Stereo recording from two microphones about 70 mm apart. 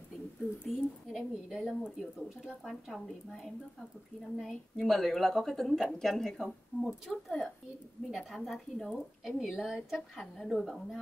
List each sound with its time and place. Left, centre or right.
0.7 s a woman's voice: centre
4.4 s a woman's voice: centre